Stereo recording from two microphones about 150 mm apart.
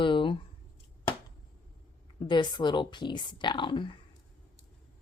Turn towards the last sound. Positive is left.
turn(degrees=35)  # may be behind; listen again after turning